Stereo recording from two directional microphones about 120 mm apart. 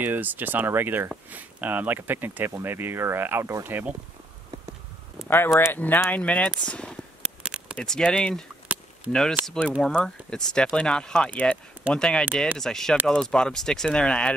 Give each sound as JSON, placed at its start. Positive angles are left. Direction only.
{"t": 0.0, "sound": "speech", "side_deg": -15}
{"t": 5.3, "sound": "speech", "side_deg": 20}
{"t": 7.2, "sound": "a sound", "side_deg": -10}
{"t": 7.7, "sound": "speech", "side_deg": 5}